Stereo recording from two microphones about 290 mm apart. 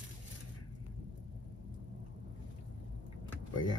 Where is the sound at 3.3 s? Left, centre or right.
Centre.